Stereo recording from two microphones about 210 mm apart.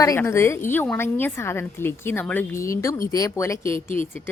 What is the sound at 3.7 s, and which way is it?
Speech, 40° left (ahead or behind).